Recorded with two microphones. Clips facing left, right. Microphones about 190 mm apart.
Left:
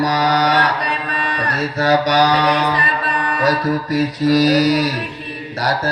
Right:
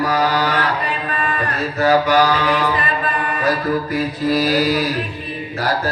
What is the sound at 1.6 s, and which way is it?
Mantra, 40° left (ahead or behind).